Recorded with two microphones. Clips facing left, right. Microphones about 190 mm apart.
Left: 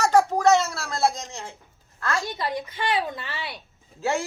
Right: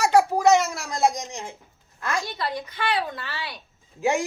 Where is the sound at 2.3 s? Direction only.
15° left (ahead or behind).